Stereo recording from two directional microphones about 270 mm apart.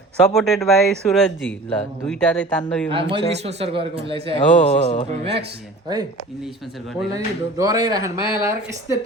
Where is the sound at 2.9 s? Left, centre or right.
Centre.